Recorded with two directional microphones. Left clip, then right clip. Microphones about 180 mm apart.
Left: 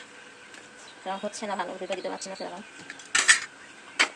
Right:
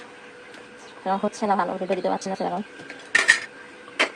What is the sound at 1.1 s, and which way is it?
A woman's voice, 30° right (ahead or behind).